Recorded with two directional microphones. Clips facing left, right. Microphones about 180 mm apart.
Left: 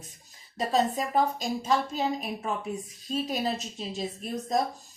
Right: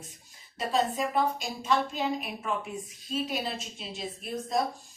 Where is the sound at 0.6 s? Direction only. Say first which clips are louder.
Left 2 dB; 40° left (ahead or behind).